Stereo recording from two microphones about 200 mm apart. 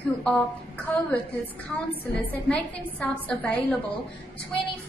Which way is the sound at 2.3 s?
10° left (ahead or behind).